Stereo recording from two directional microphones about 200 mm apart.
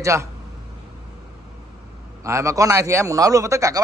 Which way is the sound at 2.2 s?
15° right (ahead or behind).